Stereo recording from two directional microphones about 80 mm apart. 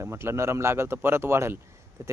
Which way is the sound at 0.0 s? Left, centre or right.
Right.